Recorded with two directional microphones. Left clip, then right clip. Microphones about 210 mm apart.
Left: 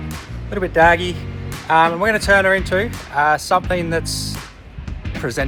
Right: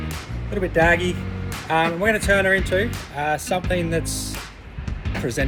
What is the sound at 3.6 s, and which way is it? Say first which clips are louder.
Speech: left 3 dB; 25° left (ahead or behind).